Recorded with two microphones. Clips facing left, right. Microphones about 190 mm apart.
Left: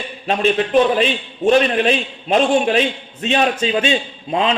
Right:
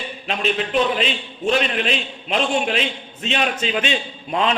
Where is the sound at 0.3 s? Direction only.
45° left (ahead or behind).